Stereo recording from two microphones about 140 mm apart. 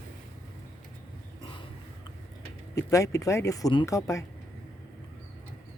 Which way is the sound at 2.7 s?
25° left (ahead or behind).